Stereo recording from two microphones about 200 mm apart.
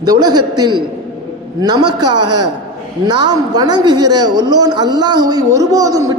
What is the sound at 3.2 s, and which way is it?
A woman's voice, 20° right (ahead or behind).